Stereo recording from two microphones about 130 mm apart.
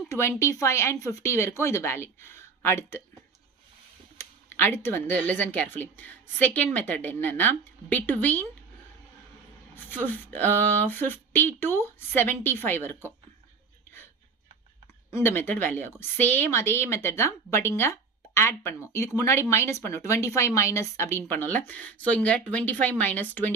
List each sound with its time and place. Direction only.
0.1 s speech: 20° left (ahead or behind)
4.2 s speech: 15° left (ahead or behind)
9.7 s speech: 15° left (ahead or behind)
15.1 s speech: 15° left (ahead or behind)